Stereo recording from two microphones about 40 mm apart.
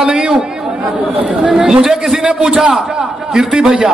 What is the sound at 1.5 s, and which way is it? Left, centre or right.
A man's voice, centre.